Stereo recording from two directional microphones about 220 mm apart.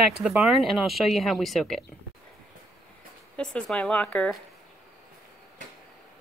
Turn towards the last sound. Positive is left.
turn(degrees=5)  # may be behind; listen again after turning